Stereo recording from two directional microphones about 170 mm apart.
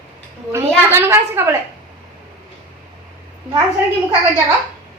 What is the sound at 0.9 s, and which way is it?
Speech, 15° right (ahead or behind).